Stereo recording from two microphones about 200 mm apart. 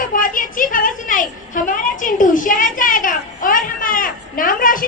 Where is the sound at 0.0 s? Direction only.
45° left (ahead or behind).